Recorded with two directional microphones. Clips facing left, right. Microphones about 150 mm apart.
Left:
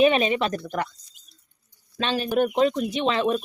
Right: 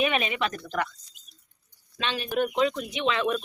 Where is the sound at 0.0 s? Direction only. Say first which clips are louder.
Left 7 dB; 30° left (ahead or behind).